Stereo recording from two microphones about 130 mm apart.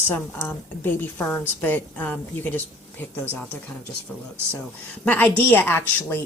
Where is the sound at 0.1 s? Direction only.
15° left (ahead or behind).